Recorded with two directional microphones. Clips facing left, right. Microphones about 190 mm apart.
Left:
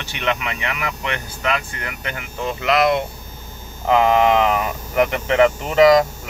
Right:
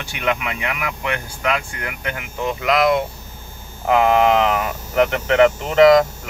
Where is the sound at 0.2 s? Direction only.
10° right (ahead or behind).